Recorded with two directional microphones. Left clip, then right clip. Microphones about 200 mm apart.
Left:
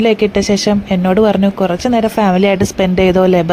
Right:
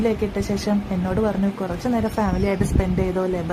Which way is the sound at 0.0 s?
35° left (ahead or behind).